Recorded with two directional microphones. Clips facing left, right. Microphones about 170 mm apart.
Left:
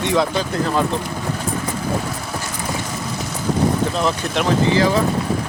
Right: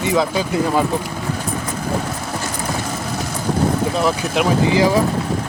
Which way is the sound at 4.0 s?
5° right (ahead or behind).